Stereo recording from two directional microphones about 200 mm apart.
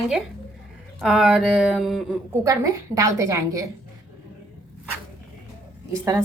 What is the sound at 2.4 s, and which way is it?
Speech, 15° right (ahead or behind).